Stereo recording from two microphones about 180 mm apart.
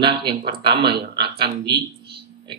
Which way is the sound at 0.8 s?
65° right (ahead or behind).